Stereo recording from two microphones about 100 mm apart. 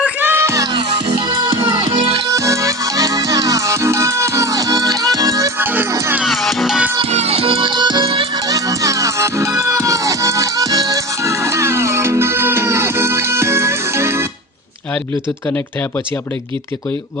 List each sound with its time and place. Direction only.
0.0 s music: 20° right (ahead or behind)
1.9 s music: 75° right (ahead or behind)
2.3 s music: 30° right (ahead or behind)
5.5 s music: 20° right (ahead or behind)
5.9 s music: 30° right (ahead or behind)
6.2 s music: centre (ahead or behind)
7.0 s music: 90° right; by 8.3 s 60° right (ahead or behind)
8.4 s music: 35° right (ahead or behind)